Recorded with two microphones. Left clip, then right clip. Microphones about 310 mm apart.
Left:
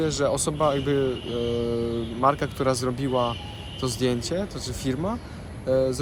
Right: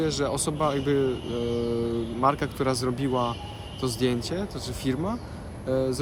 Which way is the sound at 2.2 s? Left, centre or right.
Centre.